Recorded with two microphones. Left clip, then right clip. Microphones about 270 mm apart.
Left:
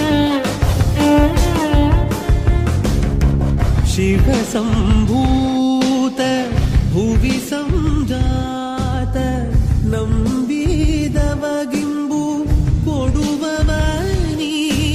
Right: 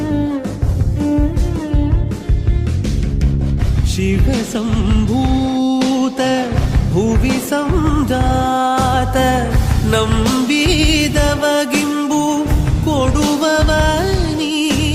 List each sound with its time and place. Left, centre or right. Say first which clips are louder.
0.0 s music: left 4 dB; left
4.0 s music: left 2 dB; centre